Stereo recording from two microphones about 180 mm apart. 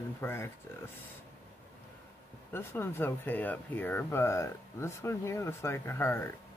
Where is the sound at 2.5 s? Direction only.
10° left (ahead or behind).